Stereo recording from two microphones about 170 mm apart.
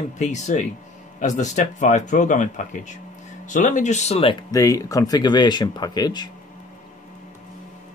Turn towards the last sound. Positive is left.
turn(degrees=25)  # may be behind; listen again after turning